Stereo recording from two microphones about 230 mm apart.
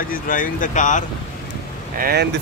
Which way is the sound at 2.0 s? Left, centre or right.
Right.